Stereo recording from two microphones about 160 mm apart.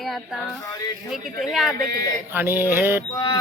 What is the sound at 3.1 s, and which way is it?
Music, 20° left (ahead or behind).